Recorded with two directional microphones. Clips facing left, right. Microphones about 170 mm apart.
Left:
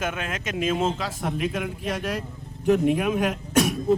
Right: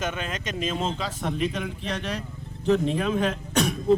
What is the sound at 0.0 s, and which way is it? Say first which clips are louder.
A man's voice: left 1 dB; 5° left (ahead or behind).